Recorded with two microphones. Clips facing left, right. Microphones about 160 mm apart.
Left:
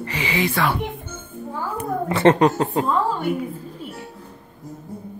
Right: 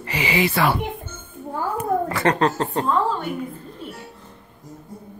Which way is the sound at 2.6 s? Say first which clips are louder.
Left 2 dB; 5° left (ahead or behind).